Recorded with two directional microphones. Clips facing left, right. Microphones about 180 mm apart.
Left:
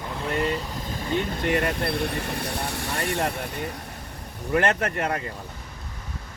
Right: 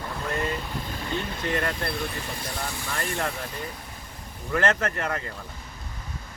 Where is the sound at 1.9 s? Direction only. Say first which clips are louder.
Left 5 dB; 65° left (ahead or behind).